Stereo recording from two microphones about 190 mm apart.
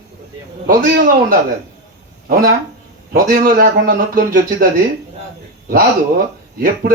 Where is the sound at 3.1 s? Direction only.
45° right (ahead or behind).